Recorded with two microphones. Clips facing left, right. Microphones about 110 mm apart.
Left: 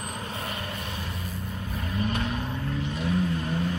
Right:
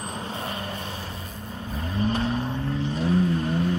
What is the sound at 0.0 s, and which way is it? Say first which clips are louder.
Vehicle: right 2 dB; 30° right (ahead or behind).